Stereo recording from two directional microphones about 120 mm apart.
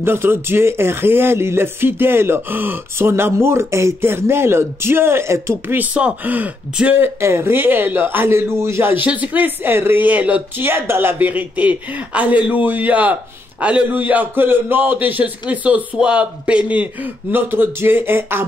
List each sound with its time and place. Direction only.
0.0 s speech: 20° right (ahead or behind)